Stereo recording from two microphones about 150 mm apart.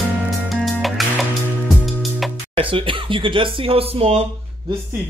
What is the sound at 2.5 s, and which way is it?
Speech, 35° right (ahead or behind).